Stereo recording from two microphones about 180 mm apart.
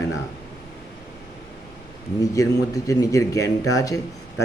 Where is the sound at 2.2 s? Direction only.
20° left (ahead or behind).